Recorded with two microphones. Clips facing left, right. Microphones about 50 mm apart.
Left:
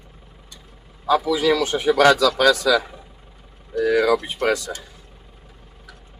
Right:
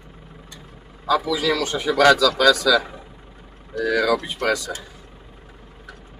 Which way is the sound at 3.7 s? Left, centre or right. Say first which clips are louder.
Left 2 dB; centre.